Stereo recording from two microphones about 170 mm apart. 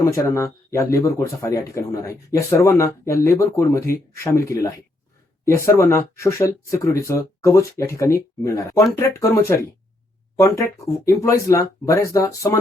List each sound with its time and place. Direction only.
0.0 s speech: 15° left (ahead or behind)